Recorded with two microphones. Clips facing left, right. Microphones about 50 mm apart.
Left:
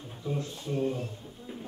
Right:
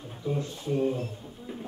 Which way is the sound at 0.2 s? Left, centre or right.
Centre.